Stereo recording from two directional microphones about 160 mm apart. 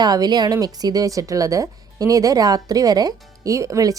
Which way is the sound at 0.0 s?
25° right (ahead or behind).